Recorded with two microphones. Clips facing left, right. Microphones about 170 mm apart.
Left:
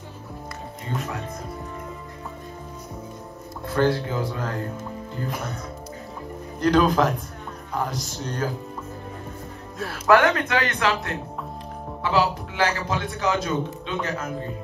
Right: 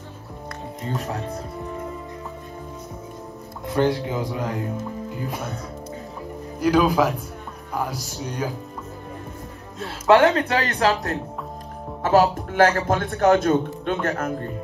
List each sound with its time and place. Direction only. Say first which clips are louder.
1.0 s speech: right 3 dB; 35° right (ahead or behind)
3.6 s speech: right 1 dB; 20° right (ahead or behind)
6.6 s speech: right 1 dB; 5° right (ahead or behind)
8.2 s speech: even; 15° right (ahead or behind)
9.8 s a man's voice: right 2 dB; 25° right (ahead or behind); by 14.3 s 60° right (ahead or behind)